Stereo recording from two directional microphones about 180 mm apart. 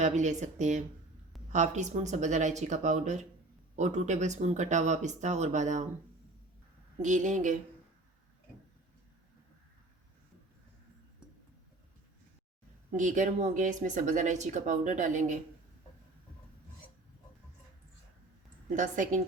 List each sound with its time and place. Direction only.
0.0 s speech: 40° right (ahead or behind)
7.0 s speech: 45° right (ahead or behind)
13.0 s speech: 45° right (ahead or behind)
18.8 s speech: 45° right (ahead or behind)